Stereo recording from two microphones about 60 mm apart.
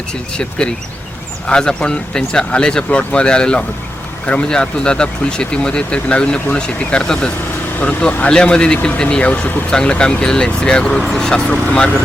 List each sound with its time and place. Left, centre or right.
1.5 s speech: centre
7.8 s speech: left